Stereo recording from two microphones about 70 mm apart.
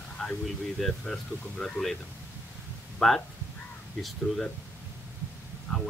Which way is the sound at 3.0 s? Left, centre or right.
Centre.